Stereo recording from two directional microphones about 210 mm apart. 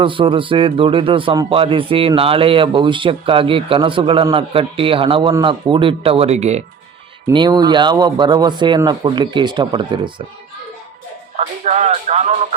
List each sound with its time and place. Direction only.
0.0 s speech: 25° right (ahead or behind)
7.3 s speech: 20° right (ahead or behind)
11.3 s music: 30° right (ahead or behind)